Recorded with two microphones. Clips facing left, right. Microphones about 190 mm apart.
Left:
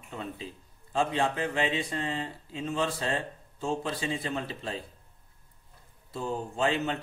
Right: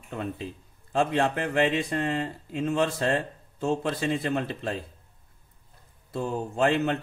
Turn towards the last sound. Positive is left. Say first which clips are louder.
# right 4 dB
turn(degrees=-55)  # may be behind; listen again after turning